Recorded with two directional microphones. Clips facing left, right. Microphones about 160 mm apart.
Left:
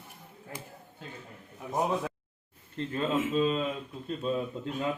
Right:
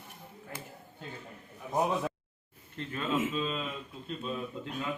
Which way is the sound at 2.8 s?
35° left (ahead or behind).